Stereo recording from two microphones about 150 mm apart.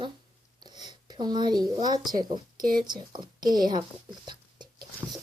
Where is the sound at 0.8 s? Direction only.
30° right (ahead or behind).